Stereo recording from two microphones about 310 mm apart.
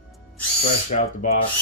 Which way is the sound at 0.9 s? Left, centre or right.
Left.